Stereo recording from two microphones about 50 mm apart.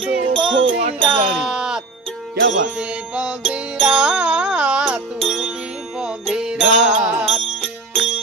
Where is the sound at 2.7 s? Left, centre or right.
Centre.